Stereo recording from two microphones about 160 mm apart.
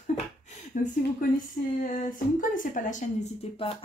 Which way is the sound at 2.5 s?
55° left (ahead or behind).